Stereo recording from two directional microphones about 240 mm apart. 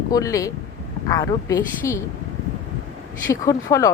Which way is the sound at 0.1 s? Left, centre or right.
Centre.